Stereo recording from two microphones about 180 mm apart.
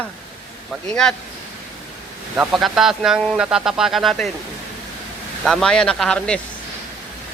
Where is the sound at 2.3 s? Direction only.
Centre (ahead or behind).